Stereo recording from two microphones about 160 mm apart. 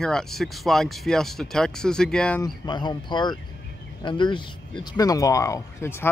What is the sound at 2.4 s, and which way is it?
A man's voice, 25° left (ahead or behind).